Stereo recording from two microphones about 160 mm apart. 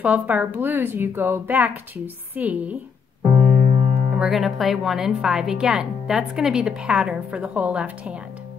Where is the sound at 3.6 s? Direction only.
40° right (ahead or behind).